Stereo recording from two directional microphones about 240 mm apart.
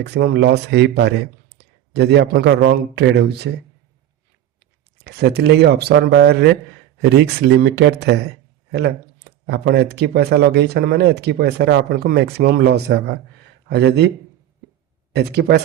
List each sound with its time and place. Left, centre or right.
0.0 s a man's voice: right
4.9 s speech: right
15.1 s speech: right